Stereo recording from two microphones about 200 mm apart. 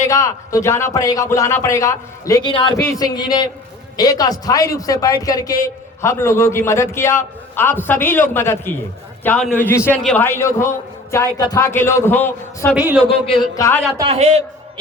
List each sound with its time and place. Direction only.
0.1 s a man's voice: 15° left (ahead or behind)
12.7 s a man's voice: 5° right (ahead or behind)
13.0 s speech: 25° left (ahead or behind)
14.1 s a man's voice: 30° right (ahead or behind)